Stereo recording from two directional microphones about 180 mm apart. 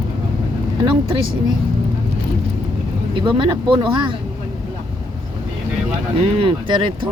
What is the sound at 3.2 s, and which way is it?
Speech, 25° right (ahead or behind).